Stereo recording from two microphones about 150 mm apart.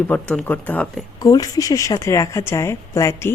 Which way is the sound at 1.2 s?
25° left (ahead or behind).